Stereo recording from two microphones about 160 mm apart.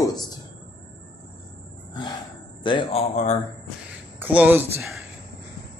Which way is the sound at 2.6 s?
30° left (ahead or behind).